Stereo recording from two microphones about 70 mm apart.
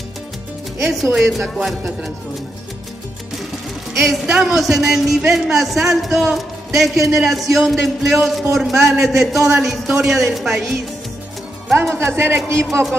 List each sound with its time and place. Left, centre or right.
1.1 s speech: centre
3.9 s speech: centre
11.7 s a man's voice: right